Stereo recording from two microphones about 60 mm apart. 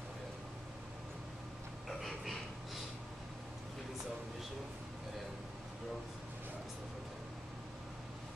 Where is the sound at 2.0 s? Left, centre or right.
Centre.